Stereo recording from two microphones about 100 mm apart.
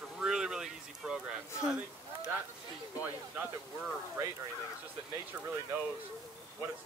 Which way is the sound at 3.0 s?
15° right (ahead or behind).